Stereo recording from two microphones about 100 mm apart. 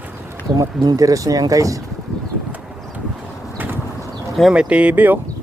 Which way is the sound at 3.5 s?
20° right (ahead or behind).